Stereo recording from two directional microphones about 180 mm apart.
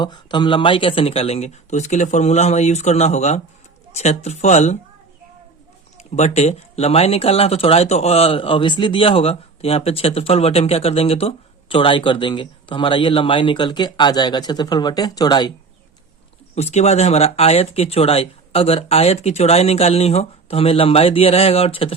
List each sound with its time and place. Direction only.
0.0 s speech: 25° left (ahead or behind)
6.0 s speech: 40° left (ahead or behind)
16.6 s speech: 35° left (ahead or behind)